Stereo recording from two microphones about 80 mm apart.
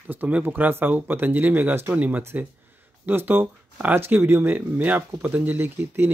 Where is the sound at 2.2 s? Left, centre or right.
Right.